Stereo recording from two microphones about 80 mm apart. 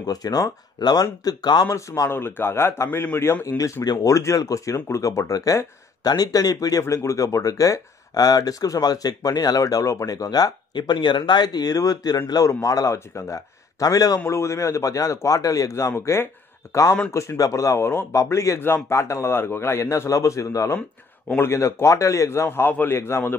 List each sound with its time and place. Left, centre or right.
0.0 s speech: left
1.7 s a man's voice: left
2.1 s a man's voice: left
3.8 s speech: left
4.1 s speech: left
6.8 s speech: left
14.2 s speech: left
15.9 s a man's voice: left